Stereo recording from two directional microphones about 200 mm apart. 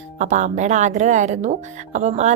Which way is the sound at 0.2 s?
35° right (ahead or behind).